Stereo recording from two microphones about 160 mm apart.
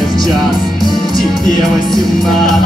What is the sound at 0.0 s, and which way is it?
Music, 30° left (ahead or behind).